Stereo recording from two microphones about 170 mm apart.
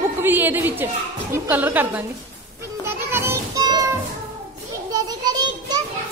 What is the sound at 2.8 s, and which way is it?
Children playing, 15° right (ahead or behind).